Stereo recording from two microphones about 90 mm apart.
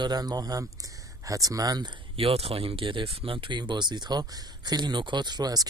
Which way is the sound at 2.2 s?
90° right.